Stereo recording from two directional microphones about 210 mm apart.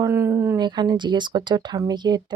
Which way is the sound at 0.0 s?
10° right (ahead or behind).